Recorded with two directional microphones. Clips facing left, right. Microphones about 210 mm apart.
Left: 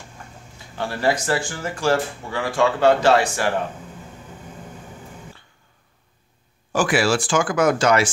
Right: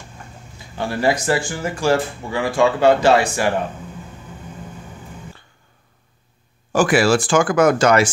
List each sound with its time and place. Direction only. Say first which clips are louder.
0.7 s speech: right 2 dB; 15° right (ahead or behind)
6.7 s speech: right 4 dB; 45° right (ahead or behind)